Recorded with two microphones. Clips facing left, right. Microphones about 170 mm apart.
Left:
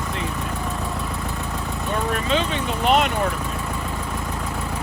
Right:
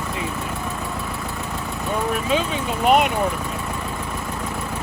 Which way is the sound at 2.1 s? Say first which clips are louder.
Even; 5° right (ahead or behind).